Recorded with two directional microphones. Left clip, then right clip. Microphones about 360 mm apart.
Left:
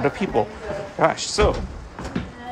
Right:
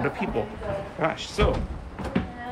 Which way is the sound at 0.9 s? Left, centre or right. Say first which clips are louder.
Left 10 dB; centre.